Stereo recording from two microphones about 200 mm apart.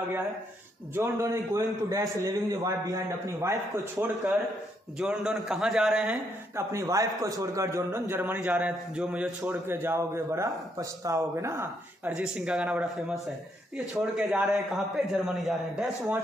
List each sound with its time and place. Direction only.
0.9 s a man's voice: 10° right (ahead or behind)
4.9 s a man's voice: 5° right (ahead or behind)